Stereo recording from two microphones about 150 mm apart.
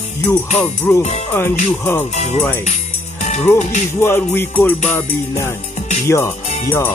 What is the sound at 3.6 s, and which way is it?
Music, 50° left (ahead or behind).